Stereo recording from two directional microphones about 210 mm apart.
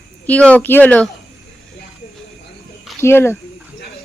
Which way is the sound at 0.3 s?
5° left (ahead or behind).